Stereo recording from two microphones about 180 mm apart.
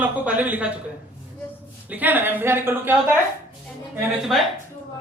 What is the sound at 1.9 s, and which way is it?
A man's voice, 10° right (ahead or behind).